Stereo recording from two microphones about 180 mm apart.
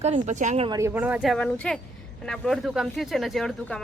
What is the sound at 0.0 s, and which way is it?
Speech, 40° right (ahead or behind).